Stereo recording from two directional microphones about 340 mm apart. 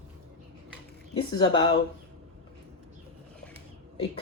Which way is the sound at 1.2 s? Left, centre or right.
Centre.